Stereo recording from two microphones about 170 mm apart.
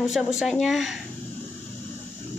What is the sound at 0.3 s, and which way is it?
Speech, 5° right (ahead or behind).